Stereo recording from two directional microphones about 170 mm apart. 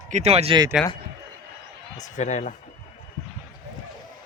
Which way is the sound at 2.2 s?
45° left (ahead or behind).